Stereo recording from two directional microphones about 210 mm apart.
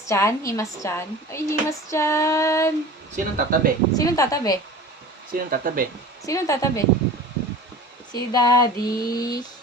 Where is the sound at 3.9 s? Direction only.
15° left (ahead or behind).